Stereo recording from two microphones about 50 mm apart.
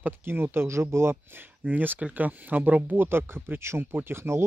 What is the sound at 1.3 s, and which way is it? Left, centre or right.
Speech, right.